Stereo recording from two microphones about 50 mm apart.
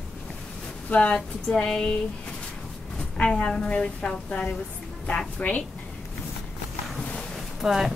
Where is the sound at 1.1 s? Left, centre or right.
Centre.